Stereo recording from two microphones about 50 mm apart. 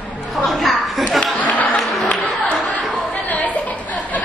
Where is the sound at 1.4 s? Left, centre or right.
Left.